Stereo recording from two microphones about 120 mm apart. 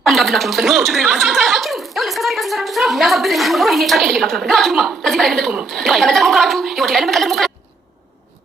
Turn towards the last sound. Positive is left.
turn(degrees=0)  # may be behind; listen again after turning